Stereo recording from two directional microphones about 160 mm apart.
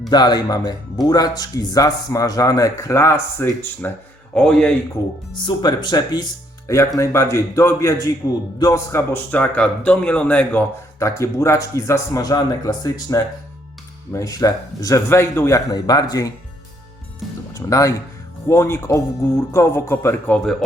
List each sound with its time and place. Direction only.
0.1 s speech: 25° left (ahead or behind); by 4.7 s 5° left (ahead or behind)
5.3 s a man's voice: 30° left (ahead or behind)
17.5 s a man's voice: 20° left (ahead or behind)